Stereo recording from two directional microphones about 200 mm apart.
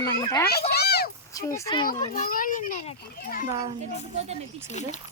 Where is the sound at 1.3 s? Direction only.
15° left (ahead or behind).